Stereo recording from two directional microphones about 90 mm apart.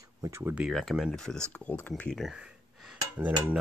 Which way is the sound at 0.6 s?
Centre (ahead or behind).